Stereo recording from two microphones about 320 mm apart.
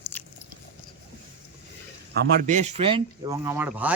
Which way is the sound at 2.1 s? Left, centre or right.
Right.